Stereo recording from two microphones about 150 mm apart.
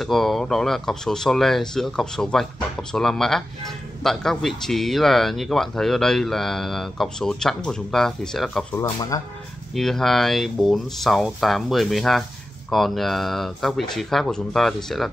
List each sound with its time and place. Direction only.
0.0 s speech: centre (ahead or behind)
9.1 s speech: 25° left (ahead or behind)
9.8 s speech: centre (ahead or behind)